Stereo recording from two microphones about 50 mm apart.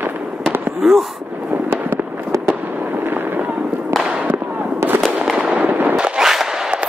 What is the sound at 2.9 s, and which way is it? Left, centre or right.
Fireworks, right.